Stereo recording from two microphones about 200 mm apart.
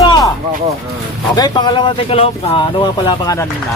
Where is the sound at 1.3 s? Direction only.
20° left (ahead or behind).